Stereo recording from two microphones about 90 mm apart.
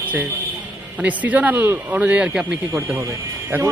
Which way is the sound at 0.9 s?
15° right (ahead or behind).